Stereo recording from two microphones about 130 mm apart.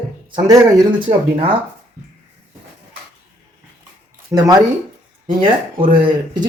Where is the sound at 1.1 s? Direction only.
45° right (ahead or behind).